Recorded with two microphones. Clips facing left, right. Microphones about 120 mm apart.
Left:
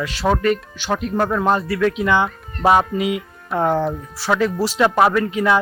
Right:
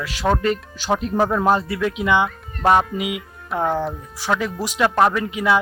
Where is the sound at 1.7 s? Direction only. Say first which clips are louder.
Left 2 dB; 15° right (ahead or behind).